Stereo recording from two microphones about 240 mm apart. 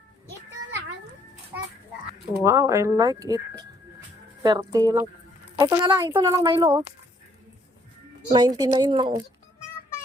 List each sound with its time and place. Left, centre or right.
2.4 s speech: centre
5.8 s a woman's voice: centre
8.3 s speech: centre